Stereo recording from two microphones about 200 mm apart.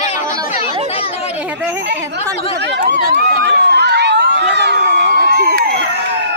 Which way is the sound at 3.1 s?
55° right (ahead or behind).